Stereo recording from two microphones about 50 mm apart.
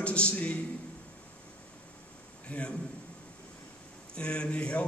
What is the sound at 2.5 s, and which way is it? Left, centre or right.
Speech, left.